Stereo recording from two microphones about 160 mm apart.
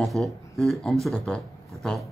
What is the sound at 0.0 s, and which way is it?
Speech, centre (ahead or behind).